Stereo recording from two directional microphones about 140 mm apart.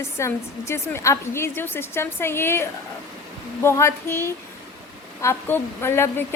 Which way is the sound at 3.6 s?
20° left (ahead or behind).